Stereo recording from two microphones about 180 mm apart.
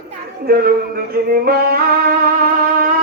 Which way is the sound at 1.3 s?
55° right (ahead or behind).